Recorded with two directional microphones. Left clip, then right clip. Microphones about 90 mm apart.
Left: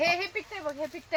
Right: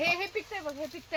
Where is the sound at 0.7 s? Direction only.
65° left (ahead or behind).